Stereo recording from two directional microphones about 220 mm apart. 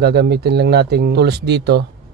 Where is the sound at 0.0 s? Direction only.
50° right (ahead or behind).